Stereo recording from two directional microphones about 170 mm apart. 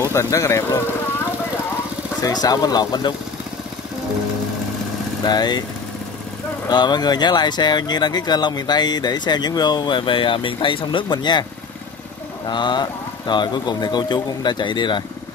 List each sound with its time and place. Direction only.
0.0 s speech: 15° left (ahead or behind)
2.2 s speech: 20° left (ahead or behind)
5.2 s speech: 25° left (ahead or behind)
6.7 s speech: 25° left (ahead or behind)
12.4 s speech: 25° left (ahead or behind)